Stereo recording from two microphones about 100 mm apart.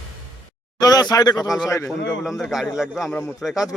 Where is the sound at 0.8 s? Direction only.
40° left (ahead or behind).